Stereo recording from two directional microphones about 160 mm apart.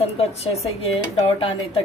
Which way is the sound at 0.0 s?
40° left (ahead or behind).